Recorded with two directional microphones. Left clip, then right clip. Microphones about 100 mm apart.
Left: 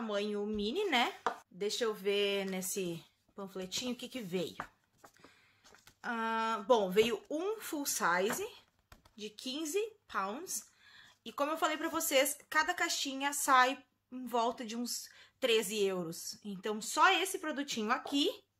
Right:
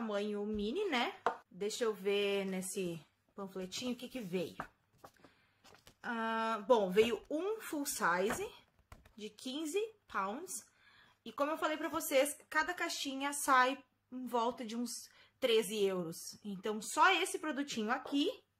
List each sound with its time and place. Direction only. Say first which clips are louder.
0.0 s speech: left 2 dB; 10° left (ahead or behind)
1.6 s speech: left 2 dB; 10° left (ahead or behind)
5.9 s speech: left 2 dB; 20° left (ahead or behind)